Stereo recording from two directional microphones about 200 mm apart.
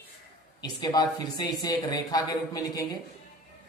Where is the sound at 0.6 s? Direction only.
20° left (ahead or behind).